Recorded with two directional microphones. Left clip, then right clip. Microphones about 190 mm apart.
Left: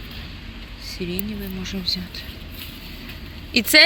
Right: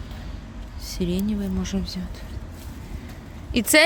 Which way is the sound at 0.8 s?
40° right (ahead or behind).